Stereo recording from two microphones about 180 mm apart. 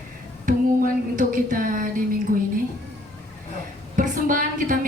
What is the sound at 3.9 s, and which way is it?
Speech, 50° right (ahead or behind).